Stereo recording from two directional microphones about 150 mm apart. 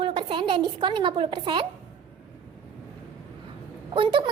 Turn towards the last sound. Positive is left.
turn(degrees=-35)  # may be behind; listen again after turning